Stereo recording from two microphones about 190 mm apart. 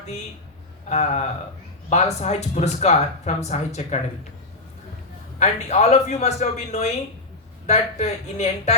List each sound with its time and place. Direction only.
0.9 s speech: 35° left (ahead or behind)
5.4 s speech: 35° left (ahead or behind)